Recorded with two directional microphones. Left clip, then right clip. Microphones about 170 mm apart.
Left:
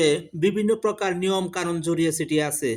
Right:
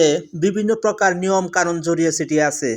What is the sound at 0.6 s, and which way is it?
Speech, 10° right (ahead or behind).